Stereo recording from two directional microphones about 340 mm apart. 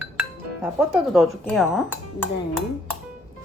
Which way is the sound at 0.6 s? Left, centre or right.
Centre.